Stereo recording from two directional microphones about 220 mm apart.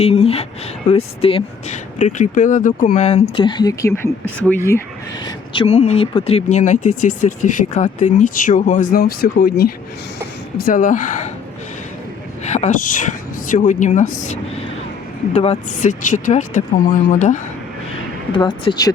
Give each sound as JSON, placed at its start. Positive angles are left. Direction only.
{"t": 0.0, "sound": "speech", "side_deg": 25}
{"t": 5.2, "sound": "speech", "side_deg": 25}
{"t": 12.5, "sound": "speech", "side_deg": 30}
{"t": 18.3, "sound": "speech", "side_deg": 20}